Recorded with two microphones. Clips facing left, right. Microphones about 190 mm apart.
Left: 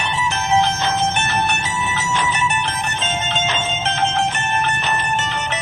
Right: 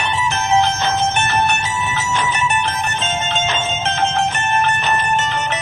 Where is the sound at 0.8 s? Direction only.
50° right (ahead or behind).